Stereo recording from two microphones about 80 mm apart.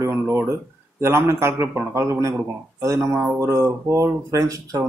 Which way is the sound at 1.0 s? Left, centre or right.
Right.